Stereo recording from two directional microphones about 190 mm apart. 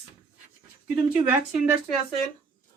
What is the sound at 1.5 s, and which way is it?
Speech, 5° right (ahead or behind).